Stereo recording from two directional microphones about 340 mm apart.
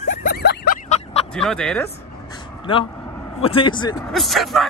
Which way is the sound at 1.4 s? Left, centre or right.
Centre.